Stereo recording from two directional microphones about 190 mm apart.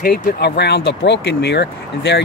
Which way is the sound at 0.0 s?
55° left (ahead or behind).